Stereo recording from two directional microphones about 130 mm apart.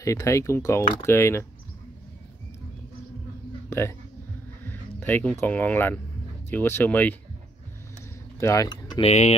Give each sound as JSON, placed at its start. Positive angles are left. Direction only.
{"t": 0.0, "sound": "speech", "side_deg": 25}
{"t": 4.6, "sound": "speech", "side_deg": 15}
{"t": 8.4, "sound": "speech", "side_deg": 25}
{"t": 9.0, "sound": "speech", "side_deg": 55}